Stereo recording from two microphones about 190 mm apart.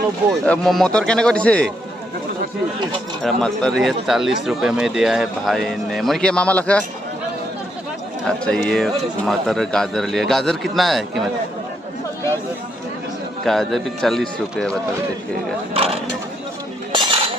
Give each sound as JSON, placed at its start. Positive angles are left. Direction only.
{"t": 0.4, "sound": "speech", "side_deg": 5}
{"t": 3.2, "sound": "speech", "side_deg": 5}
{"t": 8.4, "sound": "speech", "side_deg": 5}
{"t": 13.4, "sound": "speech", "side_deg": 0}
{"t": 15.7, "sound": "speech", "side_deg": -30}
{"t": 16.9, "sound": "cutlery", "side_deg": -25}